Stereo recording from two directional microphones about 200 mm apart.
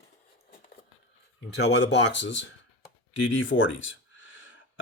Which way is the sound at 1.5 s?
60° left (ahead or behind).